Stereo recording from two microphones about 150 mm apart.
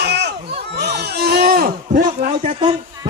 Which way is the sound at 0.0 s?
90° right.